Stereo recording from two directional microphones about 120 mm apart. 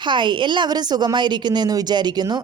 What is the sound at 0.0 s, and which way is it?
A woman's voice, 40° right (ahead or behind).